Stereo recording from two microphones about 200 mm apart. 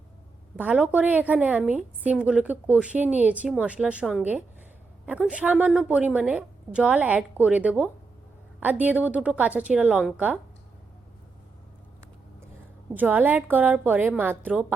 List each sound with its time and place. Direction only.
0.5 s a woman's voice: 5° right (ahead or behind)
12.9 s a woman's voice: 10° right (ahead or behind)